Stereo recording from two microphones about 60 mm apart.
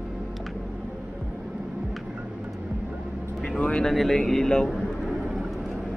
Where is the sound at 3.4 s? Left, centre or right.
Centre.